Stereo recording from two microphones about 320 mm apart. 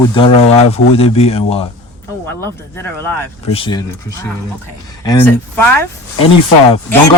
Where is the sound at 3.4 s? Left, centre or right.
Centre.